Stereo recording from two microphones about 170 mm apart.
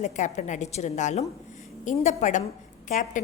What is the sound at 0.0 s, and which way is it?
A woman's voice, 45° left (ahead or behind).